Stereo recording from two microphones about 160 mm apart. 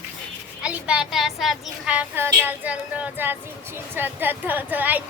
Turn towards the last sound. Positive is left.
turn(degrees=-10)  # may be behind; listen again after turning